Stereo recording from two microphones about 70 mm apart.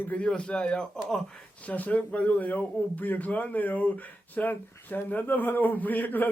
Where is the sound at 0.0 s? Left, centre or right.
Left.